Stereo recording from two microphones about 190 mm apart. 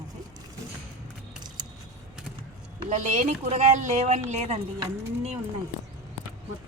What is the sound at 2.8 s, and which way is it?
Speech, 40° right (ahead or behind).